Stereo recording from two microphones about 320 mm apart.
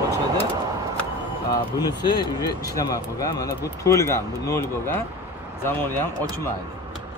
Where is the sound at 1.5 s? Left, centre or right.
Centre.